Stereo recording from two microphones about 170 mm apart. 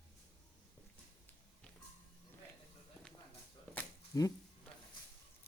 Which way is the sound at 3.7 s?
20° left (ahead or behind).